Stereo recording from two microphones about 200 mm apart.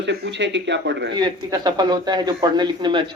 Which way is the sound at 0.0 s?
60° right (ahead or behind).